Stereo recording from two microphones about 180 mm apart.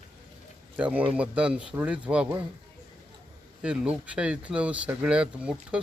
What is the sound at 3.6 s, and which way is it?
Speech, 5° right (ahead or behind).